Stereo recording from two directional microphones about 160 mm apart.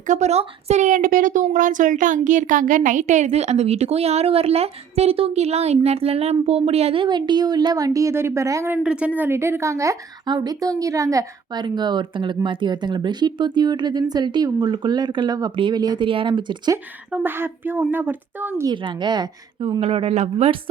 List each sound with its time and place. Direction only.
0.1 s speech: 45° right (ahead or behind)
16.7 s speech: 15° right (ahead or behind)
18.7 s speech: 30° right (ahead or behind)
19.8 s speech: 35° right (ahead or behind)